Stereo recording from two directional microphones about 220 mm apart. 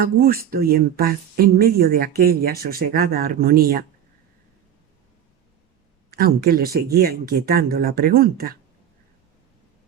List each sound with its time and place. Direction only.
0.0 s speech: 45° right (ahead or behind)
6.1 s speech: 45° right (ahead or behind)